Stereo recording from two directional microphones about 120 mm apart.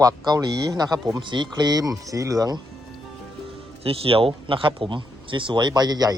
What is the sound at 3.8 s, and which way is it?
Speech, 50° right (ahead or behind).